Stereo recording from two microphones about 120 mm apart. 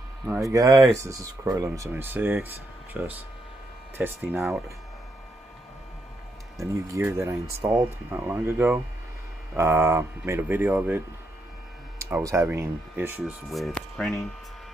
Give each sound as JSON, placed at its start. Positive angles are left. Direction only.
{"t": 0.2, "sound": "speech", "side_deg": -5}
{"t": 0.5, "sound": "speech", "side_deg": -25}
{"t": 4.3, "sound": "speech", "side_deg": -5}
{"t": 6.6, "sound": "speech", "side_deg": -25}
{"t": 7.6, "sound": "speech", "side_deg": -5}
{"t": 8.5, "sound": "speech", "side_deg": -20}
{"t": 12.0, "sound": "speech", "side_deg": -25}
{"t": 13.2, "sound": "speech", "side_deg": 0}